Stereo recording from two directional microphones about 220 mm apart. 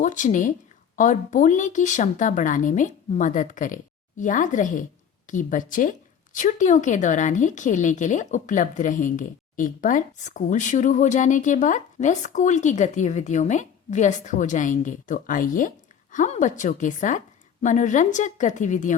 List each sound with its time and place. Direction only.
0.0 s a woman's voice: 35° left (ahead or behind)